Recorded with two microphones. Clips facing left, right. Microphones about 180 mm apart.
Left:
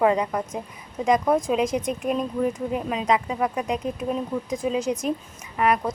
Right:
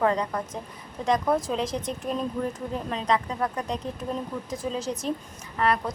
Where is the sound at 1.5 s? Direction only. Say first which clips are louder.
Left 5 dB; 10° left (ahead or behind).